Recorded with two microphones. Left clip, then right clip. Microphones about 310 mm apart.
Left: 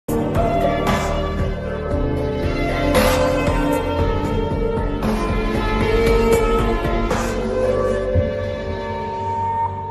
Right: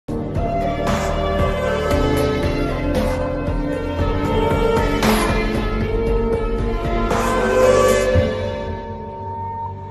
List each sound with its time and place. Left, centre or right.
7.6 s music: right